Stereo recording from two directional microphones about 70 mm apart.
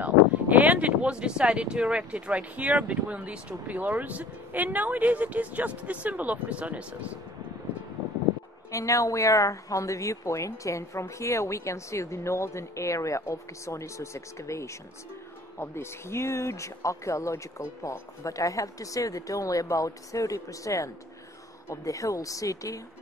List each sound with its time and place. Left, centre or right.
0.0 s speech: right
8.7 s a woman's voice: left